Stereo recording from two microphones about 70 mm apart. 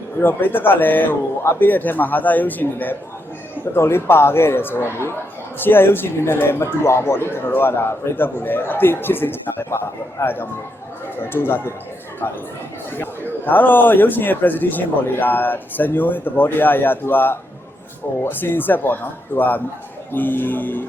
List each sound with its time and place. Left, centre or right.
0.2 s a man's voice: left
3.8 s speech: left
13.4 s a man's voice: left